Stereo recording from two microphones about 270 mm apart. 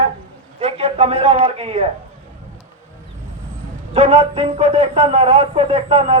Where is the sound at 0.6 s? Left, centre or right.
Right.